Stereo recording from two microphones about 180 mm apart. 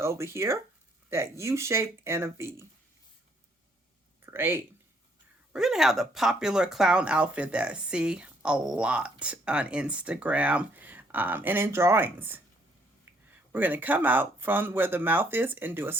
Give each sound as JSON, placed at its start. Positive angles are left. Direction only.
{"t": 0.0, "sound": "speech", "side_deg": -15}
{"t": 4.3, "sound": "speech", "side_deg": -15}
{"t": 5.5, "sound": "speech", "side_deg": 0}